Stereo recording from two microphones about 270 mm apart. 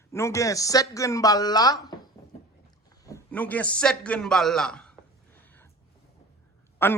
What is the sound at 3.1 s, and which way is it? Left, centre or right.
A man's voice, centre.